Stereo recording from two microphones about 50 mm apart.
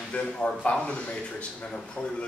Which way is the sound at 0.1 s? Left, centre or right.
Left.